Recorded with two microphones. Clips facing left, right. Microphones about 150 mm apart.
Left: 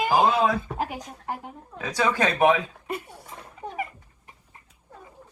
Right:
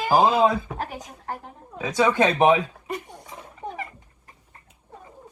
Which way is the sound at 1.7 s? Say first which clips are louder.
Right 4 dB; 20° right (ahead or behind).